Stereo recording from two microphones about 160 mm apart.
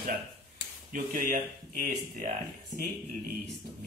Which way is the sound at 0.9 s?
60° right (ahead or behind).